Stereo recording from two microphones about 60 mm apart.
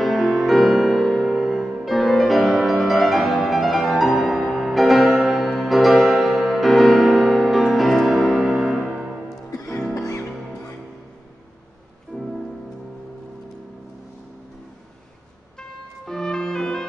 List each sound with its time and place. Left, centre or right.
0.0 s music: centre
9.7 s music: centre
9.9 s music: left
12.1 s music: centre
16.1 s music: centre